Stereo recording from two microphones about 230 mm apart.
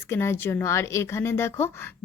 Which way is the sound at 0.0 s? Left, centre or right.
Centre.